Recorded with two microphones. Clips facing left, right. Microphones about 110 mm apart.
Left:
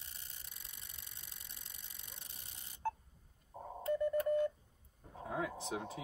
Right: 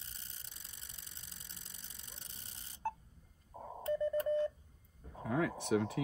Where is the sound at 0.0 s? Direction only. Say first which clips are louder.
Even; 30° right (ahead or behind).